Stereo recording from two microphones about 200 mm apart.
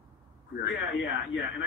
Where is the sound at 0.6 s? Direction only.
65° left (ahead or behind).